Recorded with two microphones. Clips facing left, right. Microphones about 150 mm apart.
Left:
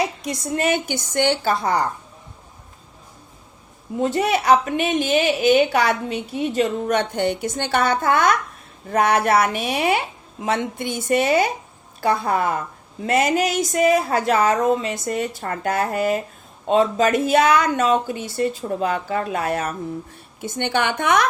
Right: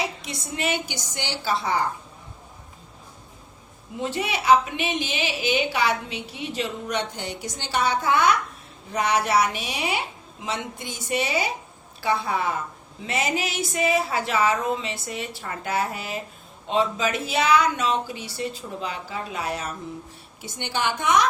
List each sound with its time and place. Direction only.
0.0 s a woman's voice: 45° left (ahead or behind)
4.0 s a woman's voice: 45° left (ahead or behind)